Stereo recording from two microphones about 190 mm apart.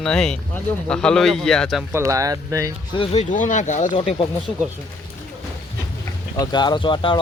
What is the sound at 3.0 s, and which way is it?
Speech, 40° left (ahead or behind).